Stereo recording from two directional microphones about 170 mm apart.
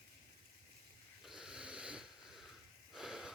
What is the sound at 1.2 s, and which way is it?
Wheeze, 5° right (ahead or behind).